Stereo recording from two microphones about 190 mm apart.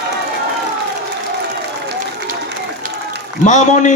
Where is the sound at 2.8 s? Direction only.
45° right (ahead or behind).